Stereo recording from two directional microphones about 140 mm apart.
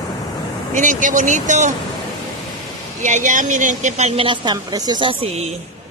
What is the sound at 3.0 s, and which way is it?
Speech, 60° right (ahead or behind).